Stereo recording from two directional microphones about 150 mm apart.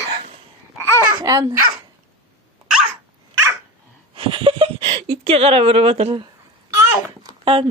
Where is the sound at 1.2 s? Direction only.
25° right (ahead or behind).